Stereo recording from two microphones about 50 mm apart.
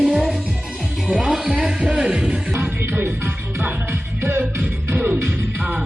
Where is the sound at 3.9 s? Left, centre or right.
Right.